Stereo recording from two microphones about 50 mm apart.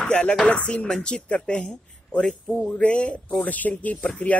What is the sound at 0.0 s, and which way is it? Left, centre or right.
Chopping, left.